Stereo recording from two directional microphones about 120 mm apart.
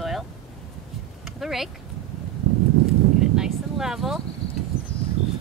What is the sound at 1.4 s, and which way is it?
Speech, centre (ahead or behind).